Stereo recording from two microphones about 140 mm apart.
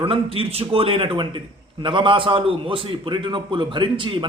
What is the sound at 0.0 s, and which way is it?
A man's voice, 40° right (ahead or behind).